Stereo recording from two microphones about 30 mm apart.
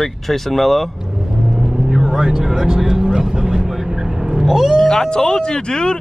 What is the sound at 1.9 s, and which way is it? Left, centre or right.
Vehicle, centre.